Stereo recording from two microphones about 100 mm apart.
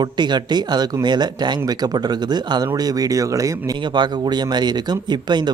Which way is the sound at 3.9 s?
45° right (ahead or behind).